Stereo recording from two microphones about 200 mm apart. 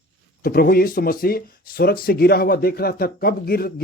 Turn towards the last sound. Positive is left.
turn(degrees=50)  # may be behind; listen again after turning